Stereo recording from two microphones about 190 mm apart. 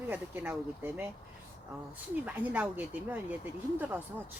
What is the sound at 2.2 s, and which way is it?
Speech, 10° right (ahead or behind).